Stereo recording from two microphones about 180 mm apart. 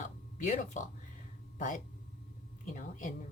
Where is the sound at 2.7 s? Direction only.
45° left (ahead or behind).